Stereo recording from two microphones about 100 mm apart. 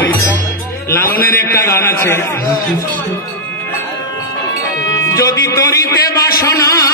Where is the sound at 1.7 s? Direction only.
30° left (ahead or behind).